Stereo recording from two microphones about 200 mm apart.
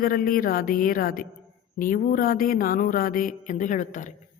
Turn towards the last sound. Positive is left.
turn(degrees=40)  # may be behind; listen again after turning